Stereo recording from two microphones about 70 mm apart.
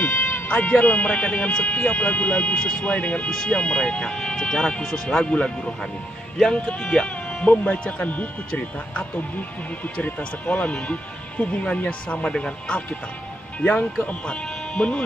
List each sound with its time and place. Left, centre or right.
0.5 s speech: centre
6.6 s speech: centre
7.4 s speech: centre